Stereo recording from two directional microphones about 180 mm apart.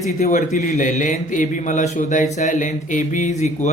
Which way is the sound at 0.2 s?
45° left (ahead or behind).